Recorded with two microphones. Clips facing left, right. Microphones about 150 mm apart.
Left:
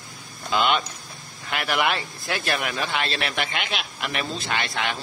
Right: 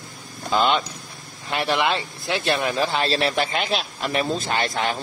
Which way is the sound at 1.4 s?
30° right (ahead or behind).